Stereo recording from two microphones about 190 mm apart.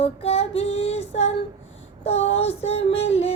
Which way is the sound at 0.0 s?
30° left (ahead or behind).